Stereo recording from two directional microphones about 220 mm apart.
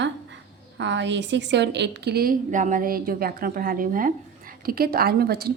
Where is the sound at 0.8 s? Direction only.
55° right (ahead or behind).